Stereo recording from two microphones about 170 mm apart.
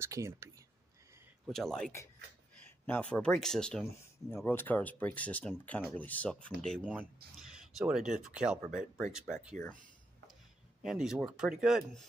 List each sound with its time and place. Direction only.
0.0 s speech: 15° right (ahead or behind)
1.5 s speech: centre (ahead or behind)
2.9 s speech: 5° left (ahead or behind)
3.9 s speech: 15° left (ahead or behind); by 9.6 s 5° right (ahead or behind)
10.8 s speech: centre (ahead or behind)